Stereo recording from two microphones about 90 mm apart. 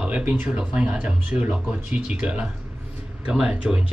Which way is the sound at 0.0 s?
15° right (ahead or behind).